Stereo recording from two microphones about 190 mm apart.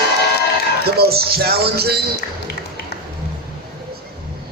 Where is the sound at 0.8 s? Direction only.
55° right (ahead or behind).